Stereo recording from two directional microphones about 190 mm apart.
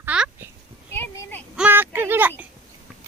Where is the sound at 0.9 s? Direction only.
10° left (ahead or behind).